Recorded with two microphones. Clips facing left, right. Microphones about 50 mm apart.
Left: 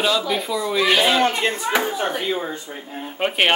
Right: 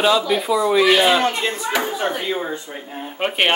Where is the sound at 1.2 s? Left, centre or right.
Left.